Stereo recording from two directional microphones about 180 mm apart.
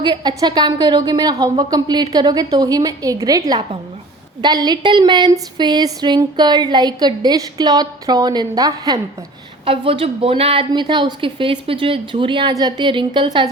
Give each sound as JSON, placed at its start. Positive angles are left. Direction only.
{"t": 0.0, "sound": "speech", "side_deg": -25}